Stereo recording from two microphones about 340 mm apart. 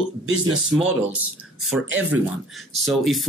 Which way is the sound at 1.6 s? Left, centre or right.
Right.